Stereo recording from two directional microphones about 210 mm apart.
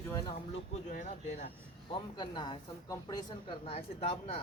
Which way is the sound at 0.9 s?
40° left (ahead or behind).